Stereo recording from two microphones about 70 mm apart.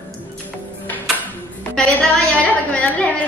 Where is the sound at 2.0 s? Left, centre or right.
Centre.